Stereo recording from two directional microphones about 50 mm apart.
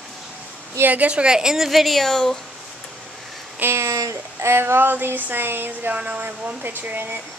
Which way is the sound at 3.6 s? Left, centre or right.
Right.